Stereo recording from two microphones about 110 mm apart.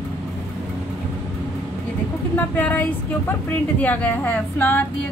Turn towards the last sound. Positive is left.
turn(degrees=15)  # may be behind; listen again after turning